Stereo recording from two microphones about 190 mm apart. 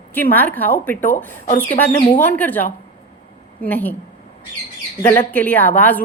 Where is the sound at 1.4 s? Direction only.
45° left (ahead or behind).